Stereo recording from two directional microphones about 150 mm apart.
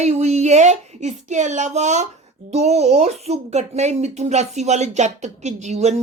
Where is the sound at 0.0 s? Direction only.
50° right (ahead or behind).